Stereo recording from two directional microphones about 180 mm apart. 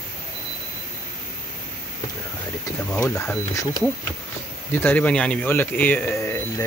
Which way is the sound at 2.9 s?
10° left (ahead or behind).